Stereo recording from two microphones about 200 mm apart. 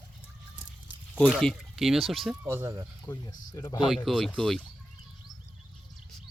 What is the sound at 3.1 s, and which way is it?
Speech, 15° left (ahead or behind).